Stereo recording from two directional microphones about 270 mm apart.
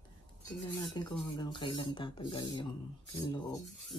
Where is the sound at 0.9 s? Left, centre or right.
Centre.